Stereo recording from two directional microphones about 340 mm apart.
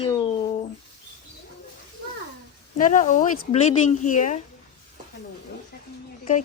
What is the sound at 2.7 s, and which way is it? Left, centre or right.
A woman's voice, left.